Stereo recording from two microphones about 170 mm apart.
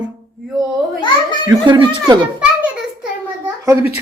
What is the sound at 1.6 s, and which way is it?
Speech, 25° right (ahead or behind).